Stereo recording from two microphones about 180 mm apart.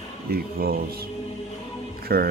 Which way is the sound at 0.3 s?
55° right (ahead or behind).